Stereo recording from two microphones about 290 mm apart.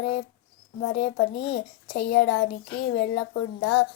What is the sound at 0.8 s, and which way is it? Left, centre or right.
Speech, left.